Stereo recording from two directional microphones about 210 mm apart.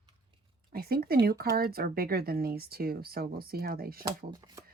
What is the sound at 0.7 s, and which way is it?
Speech, 45° right (ahead or behind).